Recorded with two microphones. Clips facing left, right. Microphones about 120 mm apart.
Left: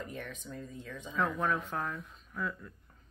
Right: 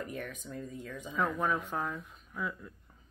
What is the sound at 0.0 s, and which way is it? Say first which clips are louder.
Speech: right 2 dB; 5° right (ahead or behind).